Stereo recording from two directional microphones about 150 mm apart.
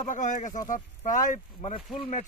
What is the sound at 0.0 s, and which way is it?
A man's voice, 55° left (ahead or behind).